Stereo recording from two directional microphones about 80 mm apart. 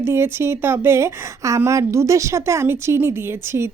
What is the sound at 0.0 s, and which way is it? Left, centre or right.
A woman's voice, right.